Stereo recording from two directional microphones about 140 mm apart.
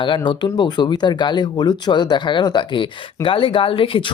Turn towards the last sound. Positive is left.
turn(degrees=40)  # may be behind; listen again after turning